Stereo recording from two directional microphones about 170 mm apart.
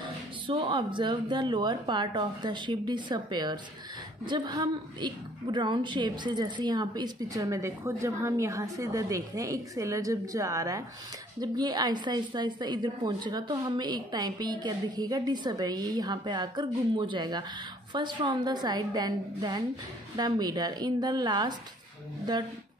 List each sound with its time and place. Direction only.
0.5 s a woman's voice: 30° right (ahead or behind)